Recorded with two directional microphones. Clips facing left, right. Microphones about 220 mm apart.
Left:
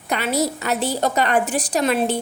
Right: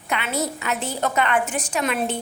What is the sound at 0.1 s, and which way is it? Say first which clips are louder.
A woman's voice: left 4 dB; 40° left (ahead or behind).